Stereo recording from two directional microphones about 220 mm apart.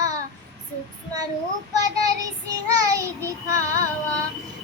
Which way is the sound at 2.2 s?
15° right (ahead or behind).